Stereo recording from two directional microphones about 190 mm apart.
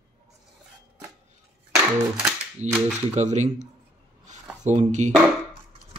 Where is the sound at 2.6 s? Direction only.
40° right (ahead or behind).